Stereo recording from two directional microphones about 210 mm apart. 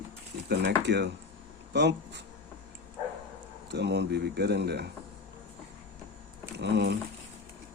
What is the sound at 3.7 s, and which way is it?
A man's voice, 55° right (ahead or behind).